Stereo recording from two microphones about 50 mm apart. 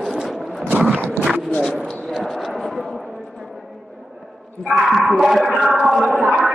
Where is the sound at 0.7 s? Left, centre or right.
Right.